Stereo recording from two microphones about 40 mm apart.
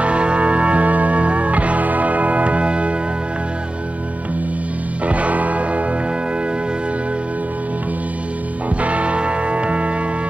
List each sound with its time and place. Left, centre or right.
0.0 s music: right
5.0 s music: right
8.8 s music: right